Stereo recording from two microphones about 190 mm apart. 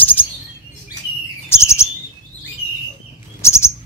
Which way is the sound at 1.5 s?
15° left (ahead or behind).